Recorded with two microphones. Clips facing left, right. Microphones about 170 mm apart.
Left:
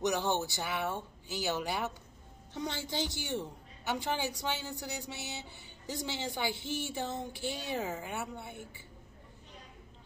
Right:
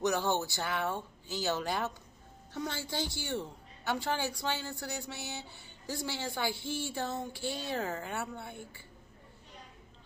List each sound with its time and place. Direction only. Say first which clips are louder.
0.0 s a woman's voice: right 1 dB; 15° left (ahead or behind)